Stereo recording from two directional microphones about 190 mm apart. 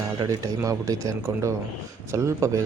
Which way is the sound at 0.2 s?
20° right (ahead or behind).